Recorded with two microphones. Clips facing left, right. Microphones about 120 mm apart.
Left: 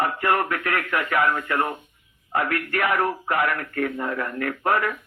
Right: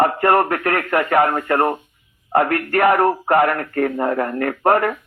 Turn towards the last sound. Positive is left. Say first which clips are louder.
# right 6 dB
turn(degrees=-50)  # may be behind; listen again after turning